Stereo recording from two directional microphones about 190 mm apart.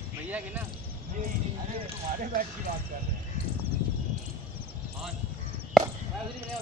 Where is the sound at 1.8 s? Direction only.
40° right (ahead or behind).